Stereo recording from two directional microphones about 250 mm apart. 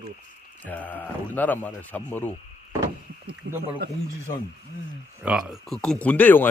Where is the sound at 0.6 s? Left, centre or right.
Centre.